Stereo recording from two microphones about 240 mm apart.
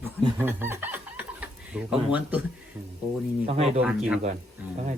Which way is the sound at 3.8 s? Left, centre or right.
Centre.